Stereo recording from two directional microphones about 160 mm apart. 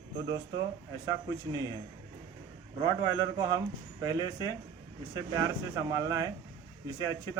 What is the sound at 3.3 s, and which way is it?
A man's voice, 25° right (ahead or behind).